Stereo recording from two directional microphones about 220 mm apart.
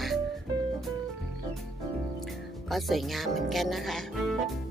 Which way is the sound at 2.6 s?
Centre (ahead or behind).